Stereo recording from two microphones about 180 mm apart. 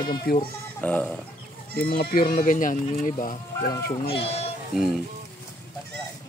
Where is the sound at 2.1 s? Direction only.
50° left (ahead or behind).